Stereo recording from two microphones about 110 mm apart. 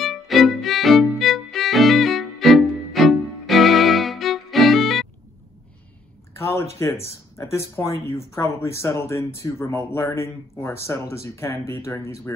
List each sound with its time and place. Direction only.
0.0 s music: centre (ahead or behind)
6.3 s a sound: 25° left (ahead or behind)
7.5 s speech: 25° left (ahead or behind)